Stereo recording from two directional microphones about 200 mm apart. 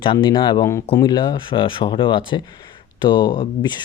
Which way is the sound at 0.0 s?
25° left (ahead or behind).